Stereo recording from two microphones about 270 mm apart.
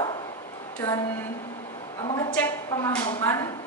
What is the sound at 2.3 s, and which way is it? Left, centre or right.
A woman's voice, centre.